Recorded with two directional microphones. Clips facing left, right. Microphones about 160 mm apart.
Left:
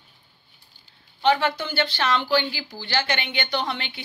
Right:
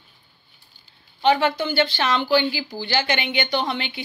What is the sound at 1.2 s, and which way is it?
A woman's voice, 15° right (ahead or behind).